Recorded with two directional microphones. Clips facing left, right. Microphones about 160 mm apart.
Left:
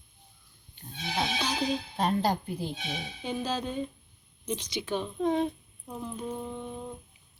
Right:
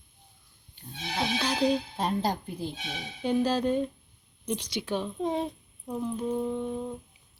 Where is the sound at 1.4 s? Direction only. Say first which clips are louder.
Right 4 dB; 10° left (ahead or behind).